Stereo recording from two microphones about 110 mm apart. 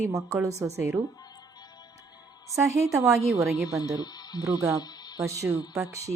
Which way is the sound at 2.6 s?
30° right (ahead or behind).